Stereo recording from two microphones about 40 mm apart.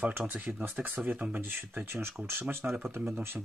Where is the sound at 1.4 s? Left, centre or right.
Right.